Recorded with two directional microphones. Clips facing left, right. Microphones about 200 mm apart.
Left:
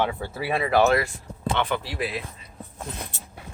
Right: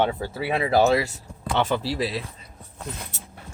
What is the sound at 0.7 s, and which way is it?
Speech, 35° right (ahead or behind).